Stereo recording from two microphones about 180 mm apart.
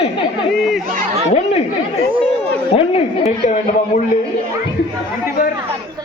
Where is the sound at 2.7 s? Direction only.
35° left (ahead or behind).